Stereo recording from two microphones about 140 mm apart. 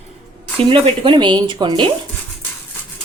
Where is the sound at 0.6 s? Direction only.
40° right (ahead or behind).